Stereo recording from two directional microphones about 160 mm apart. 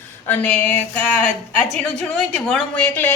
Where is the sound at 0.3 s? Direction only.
10° left (ahead or behind).